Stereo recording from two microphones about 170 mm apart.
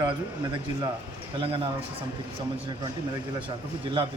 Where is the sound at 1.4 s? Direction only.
30° right (ahead or behind).